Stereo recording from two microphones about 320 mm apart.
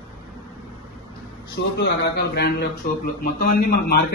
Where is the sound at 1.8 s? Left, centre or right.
Left.